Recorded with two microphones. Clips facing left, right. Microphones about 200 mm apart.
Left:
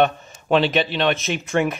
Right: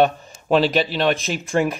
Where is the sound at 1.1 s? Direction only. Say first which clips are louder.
Even; centre (ahead or behind).